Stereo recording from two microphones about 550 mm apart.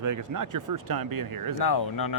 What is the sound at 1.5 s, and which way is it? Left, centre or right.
Speech, left.